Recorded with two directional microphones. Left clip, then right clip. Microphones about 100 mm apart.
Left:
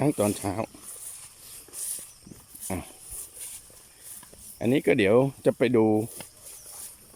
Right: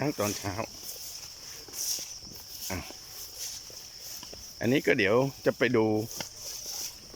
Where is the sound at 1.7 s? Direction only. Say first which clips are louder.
Right 8 dB; centre (ahead or behind).